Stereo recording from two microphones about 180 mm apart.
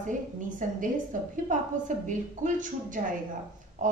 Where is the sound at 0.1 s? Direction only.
45° right (ahead or behind).